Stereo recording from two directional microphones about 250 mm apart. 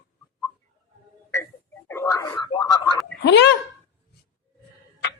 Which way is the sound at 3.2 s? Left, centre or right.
Left.